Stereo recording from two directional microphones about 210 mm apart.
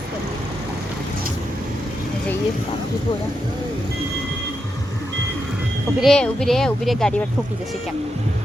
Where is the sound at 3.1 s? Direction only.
20° left (ahead or behind).